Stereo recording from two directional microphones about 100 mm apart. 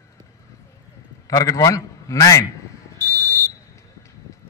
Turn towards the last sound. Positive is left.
turn(degrees=30)  # may be behind; listen again after turning